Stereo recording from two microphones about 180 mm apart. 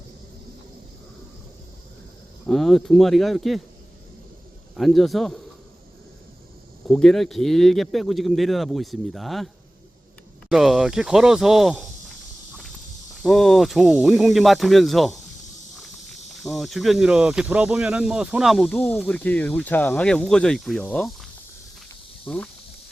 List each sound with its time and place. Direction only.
2.5 s speech: centre (ahead or behind)
4.7 s speech: centre (ahead or behind)
6.8 s speech: centre (ahead or behind)
10.5 s speech: centre (ahead or behind)
13.2 s speech: centre (ahead or behind)
15.7 s walk: centre (ahead or behind)
16.3 s speech: centre (ahead or behind)